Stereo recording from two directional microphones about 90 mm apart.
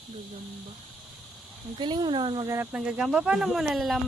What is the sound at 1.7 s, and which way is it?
Speech, 55° right (ahead or behind).